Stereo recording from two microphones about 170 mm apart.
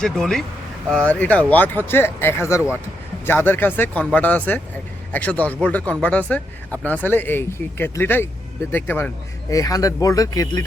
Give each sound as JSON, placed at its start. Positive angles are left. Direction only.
{"t": 0.0, "sound": "speech", "side_deg": 5}